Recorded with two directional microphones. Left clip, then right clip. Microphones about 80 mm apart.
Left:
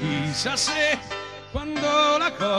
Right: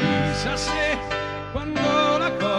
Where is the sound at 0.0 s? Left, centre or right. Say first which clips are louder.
Right 4 dB; left.